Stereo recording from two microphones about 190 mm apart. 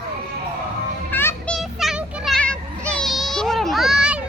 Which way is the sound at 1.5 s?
Centre (ahead or behind).